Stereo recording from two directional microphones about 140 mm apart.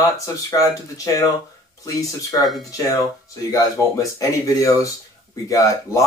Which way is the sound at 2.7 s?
25° left (ahead or behind).